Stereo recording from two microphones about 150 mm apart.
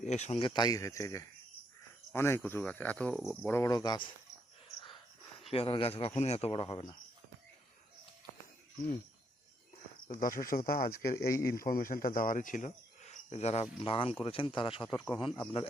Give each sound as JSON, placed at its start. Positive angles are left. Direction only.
{"t": 0.0, "sound": "speech", "side_deg": 50}
{"t": 5.5, "sound": "speech", "side_deg": 40}
{"t": 10.1, "sound": "speech", "side_deg": 65}
{"t": 11.4, "sound": "cricket", "side_deg": 70}
{"t": 14.3, "sound": "speech", "side_deg": 35}